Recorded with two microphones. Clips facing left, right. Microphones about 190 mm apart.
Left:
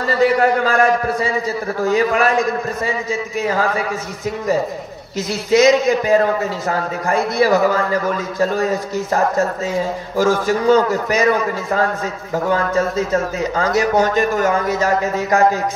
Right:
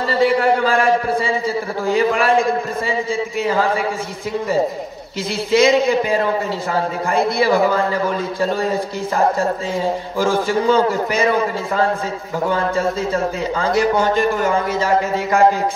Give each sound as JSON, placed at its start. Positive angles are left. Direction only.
{"t": 0.2, "sound": "a man's voice", "side_deg": 45}
{"t": 5.5, "sound": "a man's voice", "side_deg": 45}
{"t": 7.3, "sound": "a man's voice", "side_deg": 40}
{"t": 10.1, "sound": "a man's voice", "side_deg": 40}